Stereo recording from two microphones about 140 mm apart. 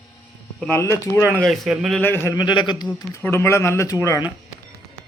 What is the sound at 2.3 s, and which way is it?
Speech, 30° left (ahead or behind).